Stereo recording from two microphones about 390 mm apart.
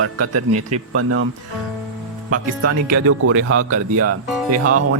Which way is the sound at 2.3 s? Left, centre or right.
Right.